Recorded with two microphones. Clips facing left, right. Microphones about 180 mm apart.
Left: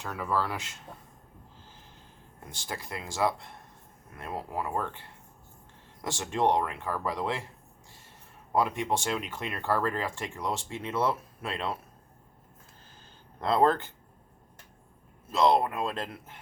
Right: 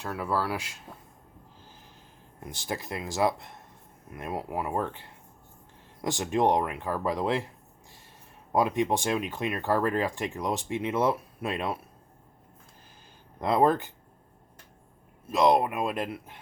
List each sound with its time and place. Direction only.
0.1 s speech: 5° right (ahead or behind)
2.4 s speech: 20° right (ahead or behind)
8.5 s speech: 15° right (ahead or behind)
13.4 s speech: 15° right (ahead or behind)
15.3 s speech: 15° right (ahead or behind)